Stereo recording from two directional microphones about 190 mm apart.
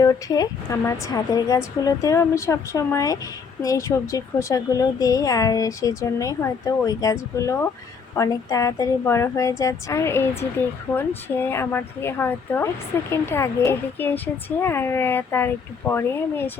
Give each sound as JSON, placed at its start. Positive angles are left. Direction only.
{"t": 0.0, "sound": "a woman's voice", "side_deg": 20}